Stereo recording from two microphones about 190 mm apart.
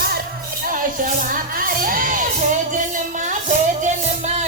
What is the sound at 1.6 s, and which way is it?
Music, 45° right (ahead or behind).